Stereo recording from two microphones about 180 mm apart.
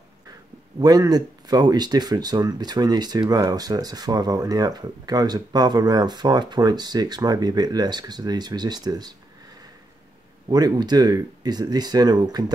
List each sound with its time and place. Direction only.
0.7 s speech: 20° right (ahead or behind)
10.5 s speech: 20° right (ahead or behind)